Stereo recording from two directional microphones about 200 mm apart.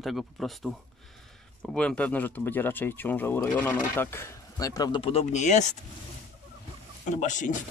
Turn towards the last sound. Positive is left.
turn(degrees=40)  # may be behind; listen again after turning